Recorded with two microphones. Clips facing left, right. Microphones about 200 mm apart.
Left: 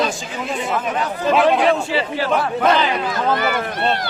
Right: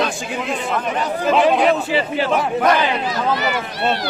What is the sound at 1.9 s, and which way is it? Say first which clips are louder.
Speech: right 2 dB; 20° right (ahead or behind).